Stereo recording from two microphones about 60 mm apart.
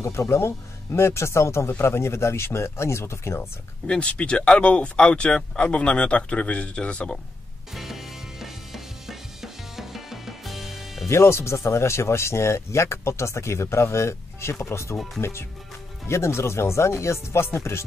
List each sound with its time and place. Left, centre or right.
0.0 s speech: left
3.8 s speech: centre
7.7 s music: centre
11.1 s speech: left